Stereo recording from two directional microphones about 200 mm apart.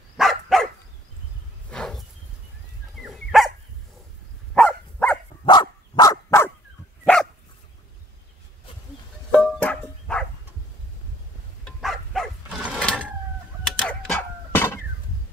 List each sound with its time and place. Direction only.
0.2 s dog: centre (ahead or behind)
1.7 s a sound: 5° left (ahead or behind)
3.0 s dog: centre (ahead or behind)
4.6 s dog: 5° left (ahead or behind)
5.4 s dog: 20° left (ahead or behind)
9.3 s music: 5° left (ahead or behind)
11.6 s pulleys: centre (ahead or behind)
13.7 s a sound: 5° left (ahead or behind)